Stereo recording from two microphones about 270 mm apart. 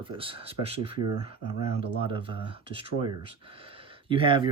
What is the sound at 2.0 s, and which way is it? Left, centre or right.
Speech, centre.